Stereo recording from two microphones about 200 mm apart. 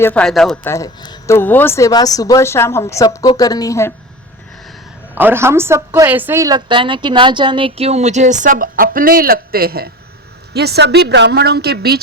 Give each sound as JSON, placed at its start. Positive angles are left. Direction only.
{"t": 0.0, "sound": "speech", "side_deg": 5}
{"t": 0.7, "sound": "speech", "side_deg": 15}
{"t": 5.1, "sound": "a woman's voice", "side_deg": -10}